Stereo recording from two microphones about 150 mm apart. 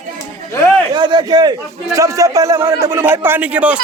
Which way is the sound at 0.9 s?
30° right (ahead or behind).